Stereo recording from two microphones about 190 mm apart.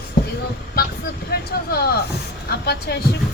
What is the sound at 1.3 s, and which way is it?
Speech, 55° left (ahead or behind).